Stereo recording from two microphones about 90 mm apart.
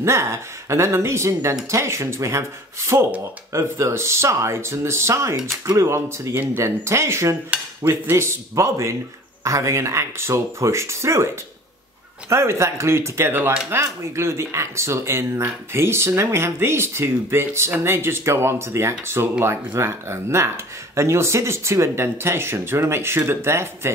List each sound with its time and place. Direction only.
0.0 s speech: 30° right (ahead or behind)